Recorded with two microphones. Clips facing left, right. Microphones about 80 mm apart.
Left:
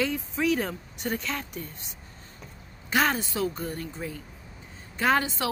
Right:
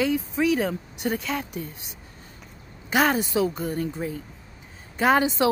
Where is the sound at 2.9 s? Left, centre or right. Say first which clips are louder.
Right 4 dB; centre.